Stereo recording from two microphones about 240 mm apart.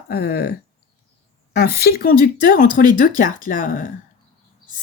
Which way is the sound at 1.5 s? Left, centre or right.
Left.